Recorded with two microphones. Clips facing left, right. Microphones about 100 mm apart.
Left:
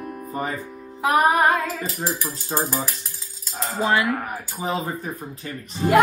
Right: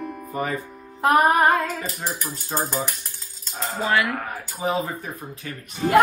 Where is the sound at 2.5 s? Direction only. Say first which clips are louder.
Left 1 dB; 10° left (ahead or behind).